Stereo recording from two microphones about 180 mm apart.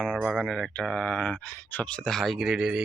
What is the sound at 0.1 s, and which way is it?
Speech, 5° right (ahead or behind).